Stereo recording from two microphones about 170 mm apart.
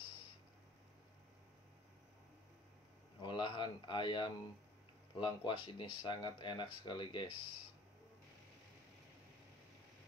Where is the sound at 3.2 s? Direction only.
25° left (ahead or behind).